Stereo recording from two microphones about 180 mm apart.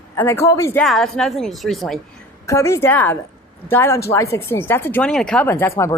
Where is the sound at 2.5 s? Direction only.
15° left (ahead or behind).